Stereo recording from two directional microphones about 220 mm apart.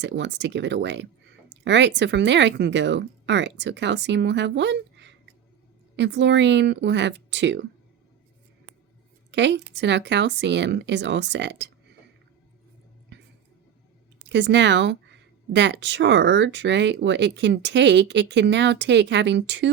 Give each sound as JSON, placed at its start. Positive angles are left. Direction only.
{"t": 0.0, "sound": "speech", "side_deg": -55}
{"t": 9.3, "sound": "speech", "side_deg": -55}
{"t": 14.3, "sound": "speech", "side_deg": -50}